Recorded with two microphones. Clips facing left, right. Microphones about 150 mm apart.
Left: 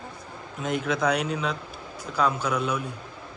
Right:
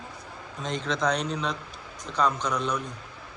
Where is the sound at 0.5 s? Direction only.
5° left (ahead or behind).